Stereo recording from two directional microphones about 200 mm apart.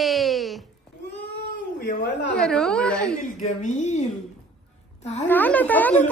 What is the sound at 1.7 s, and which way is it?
Speech, 60° left (ahead or behind).